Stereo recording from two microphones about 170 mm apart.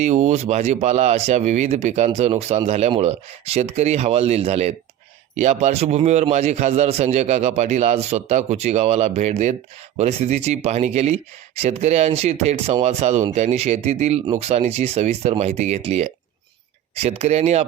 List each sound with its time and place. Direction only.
0.0 s speech: 45° right (ahead or behind)